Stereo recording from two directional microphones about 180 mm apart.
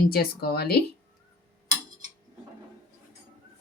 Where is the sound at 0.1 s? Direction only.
60° left (ahead or behind).